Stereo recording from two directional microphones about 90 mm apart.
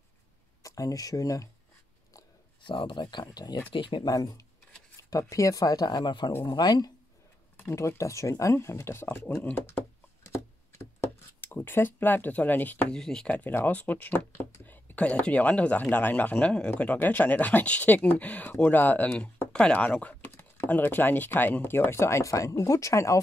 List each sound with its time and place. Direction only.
0.6 s speech: 40° left (ahead or behind)
2.6 s speech: 65° left (ahead or behind)
3.7 s speech: 60° left (ahead or behind)
4.1 s speech: 45° left (ahead or behind)
7.5 s speech: 30° left (ahead or behind)
11.4 s speech: 20° left (ahead or behind)
12.9 s speech: 5° left (ahead or behind)
13.3 s speech: 20° left (ahead or behind); by 23.2 s 35° left (ahead or behind)